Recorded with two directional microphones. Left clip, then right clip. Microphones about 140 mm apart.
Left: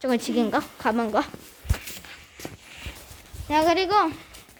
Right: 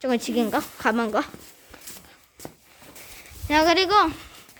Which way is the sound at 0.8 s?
30° right (ahead or behind).